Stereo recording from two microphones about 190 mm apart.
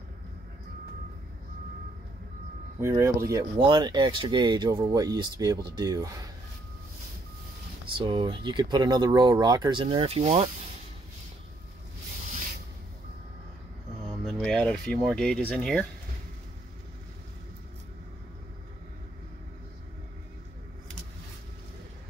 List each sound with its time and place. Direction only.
2.8 s speech: 15° right (ahead or behind)
8.0 s speech: 25° right (ahead or behind)
14.2 s speech: centre (ahead or behind)